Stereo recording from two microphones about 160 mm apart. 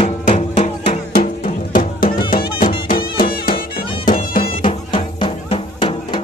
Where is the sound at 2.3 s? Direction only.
65° left (ahead or behind).